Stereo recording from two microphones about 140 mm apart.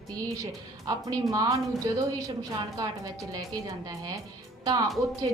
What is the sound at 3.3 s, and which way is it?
Speech, 25° right (ahead or behind).